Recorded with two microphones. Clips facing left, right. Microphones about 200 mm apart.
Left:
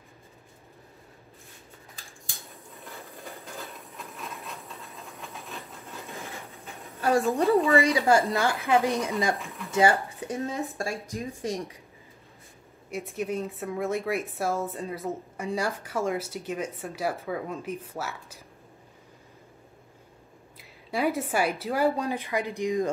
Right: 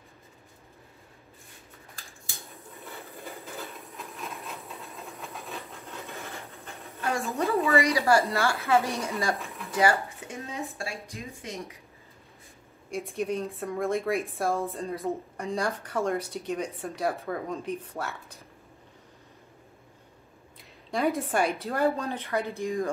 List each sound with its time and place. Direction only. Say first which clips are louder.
3.4 s train: right 1 dB; centre (ahead or behind)
7.0 s a woman's voice: left 6 dB; 35° left (ahead or behind); by 8.9 s 15° left (ahead or behind)
9.7 s a sound: left 2 dB; 25° left (ahead or behind)
10.4 s a woman's voice: left 4 dB; 45° left (ahead or behind)
12.9 s speech: right 1 dB; 5° left (ahead or behind)
20.5 s a woman's voice: left 1 dB; 5° left (ahead or behind)
21.9 s speech: left 1 dB; 10° left (ahead or behind)